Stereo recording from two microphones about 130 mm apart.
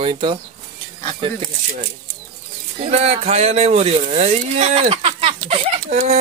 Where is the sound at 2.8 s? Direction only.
55° right (ahead or behind).